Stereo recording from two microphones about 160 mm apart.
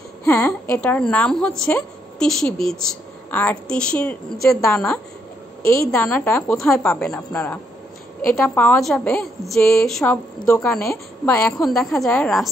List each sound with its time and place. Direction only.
0.2 s a woman's voice: 5° left (ahead or behind)
5.7 s a woman's voice: 15° left (ahead or behind)
6.5 s a woman's voice: 5° left (ahead or behind)
8.3 s a woman's voice: 10° left (ahead or behind)
10.5 s a woman's voice: 15° left (ahead or behind)